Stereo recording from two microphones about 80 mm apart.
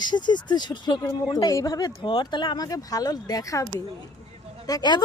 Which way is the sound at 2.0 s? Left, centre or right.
Left.